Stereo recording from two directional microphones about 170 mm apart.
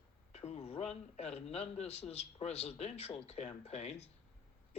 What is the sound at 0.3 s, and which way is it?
A man's voice, 40° left (ahead or behind).